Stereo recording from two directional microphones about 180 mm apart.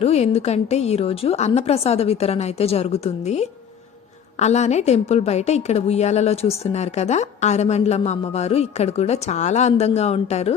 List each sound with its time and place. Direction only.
0.0 s a woman's voice: 35° left (ahead or behind)